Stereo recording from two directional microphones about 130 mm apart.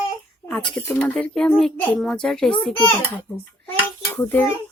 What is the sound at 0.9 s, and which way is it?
Speech, 10° left (ahead or behind).